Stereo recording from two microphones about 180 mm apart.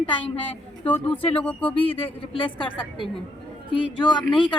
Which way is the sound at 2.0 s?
30° left (ahead or behind).